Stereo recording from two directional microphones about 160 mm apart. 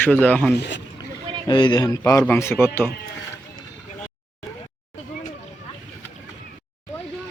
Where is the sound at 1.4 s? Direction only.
30° left (ahead or behind); by 2.9 s 15° left (ahead or behind).